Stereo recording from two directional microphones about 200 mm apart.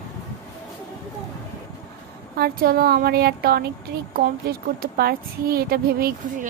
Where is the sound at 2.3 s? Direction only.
50° right (ahead or behind).